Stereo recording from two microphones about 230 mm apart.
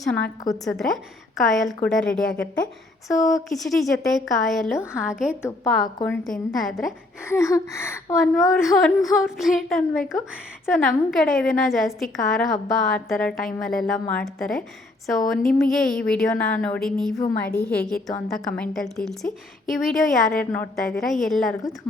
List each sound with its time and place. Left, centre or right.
0.0 s a woman's voice: centre
3.1 s a woman's voice: centre
3.6 s a woman's voice: centre
5.4 s a woman's voice: centre
6.2 s a woman's voice: centre
7.3 s a woman's voice: centre
8.2 s a woman's voice: centre